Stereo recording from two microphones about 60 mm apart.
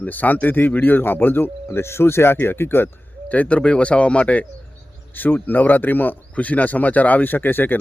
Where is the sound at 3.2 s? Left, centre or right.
Left.